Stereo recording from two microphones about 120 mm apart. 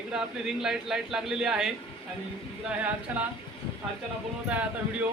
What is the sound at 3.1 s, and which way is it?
Speech, 15° right (ahead or behind).